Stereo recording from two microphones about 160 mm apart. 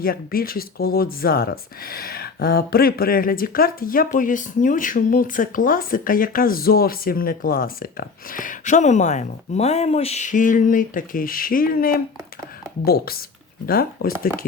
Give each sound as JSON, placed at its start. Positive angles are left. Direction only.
{"t": 0.0, "sound": "speech", "side_deg": 70}